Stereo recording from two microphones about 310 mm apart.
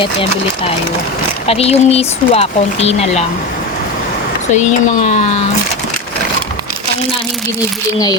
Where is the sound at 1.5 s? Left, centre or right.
Centre.